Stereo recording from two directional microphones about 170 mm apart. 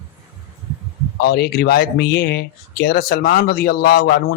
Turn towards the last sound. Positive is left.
turn(degrees=60)  # may be behind; listen again after turning